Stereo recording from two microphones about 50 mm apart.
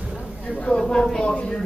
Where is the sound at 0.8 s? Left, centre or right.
Centre.